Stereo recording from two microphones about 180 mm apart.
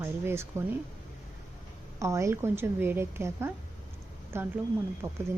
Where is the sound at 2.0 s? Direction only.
15° right (ahead or behind).